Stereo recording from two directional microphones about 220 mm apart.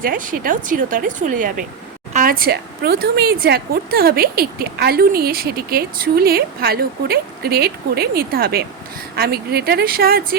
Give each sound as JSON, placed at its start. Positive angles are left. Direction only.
{"t": 0.0, "sound": "a woman's voice", "side_deg": -40}